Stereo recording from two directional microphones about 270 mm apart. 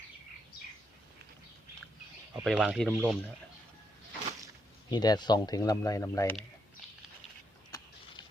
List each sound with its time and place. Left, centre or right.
2.3 s speech: centre
4.9 s speech: centre